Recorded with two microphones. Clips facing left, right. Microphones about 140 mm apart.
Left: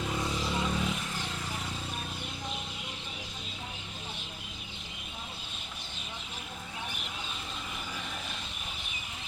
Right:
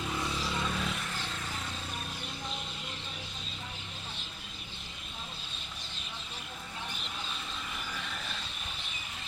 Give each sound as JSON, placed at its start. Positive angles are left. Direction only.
{"t": 0.1, "sound": "vehicle", "side_deg": 15}